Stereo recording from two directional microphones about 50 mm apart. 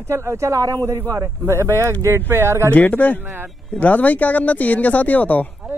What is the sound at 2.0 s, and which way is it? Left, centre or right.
Speech, right.